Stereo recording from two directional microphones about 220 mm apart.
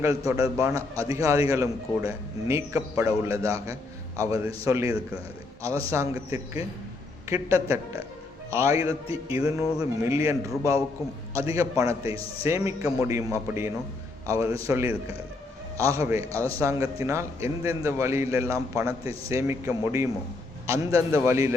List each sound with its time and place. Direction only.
0.6 s a man's voice: 15° right (ahead or behind)
12.0 s a man's voice: 25° left (ahead or behind)
12.5 s a man's voice: 15° right (ahead or behind)